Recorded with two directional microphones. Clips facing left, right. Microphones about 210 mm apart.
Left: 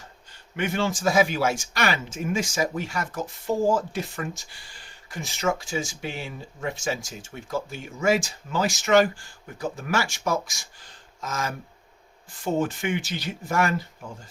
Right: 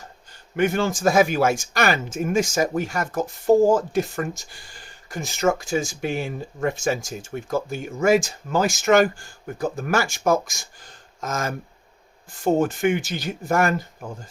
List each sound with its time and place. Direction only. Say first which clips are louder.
0.5 s speech: right 5 dB; 45° right (ahead or behind)